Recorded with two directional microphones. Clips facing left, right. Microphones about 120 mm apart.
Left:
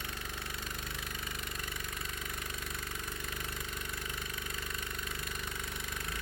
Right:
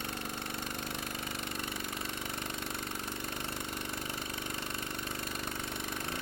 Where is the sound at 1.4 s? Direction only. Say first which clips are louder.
Right 4 dB; 30° right (ahead or behind).